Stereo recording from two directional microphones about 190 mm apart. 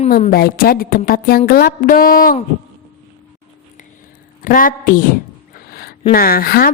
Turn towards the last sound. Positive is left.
turn(degrees=50)  # may be behind; listen again after turning